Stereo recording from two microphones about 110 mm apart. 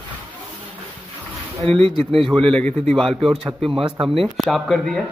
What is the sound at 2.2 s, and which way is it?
Speech, 5° left (ahead or behind).